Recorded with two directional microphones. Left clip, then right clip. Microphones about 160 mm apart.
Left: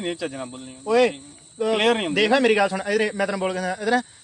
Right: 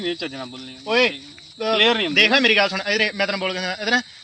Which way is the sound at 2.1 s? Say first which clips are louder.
Right 4 dB; 40° left (ahead or behind).